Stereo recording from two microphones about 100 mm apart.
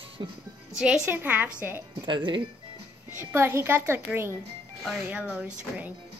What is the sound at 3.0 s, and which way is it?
A child's voice, 25° right (ahead or behind).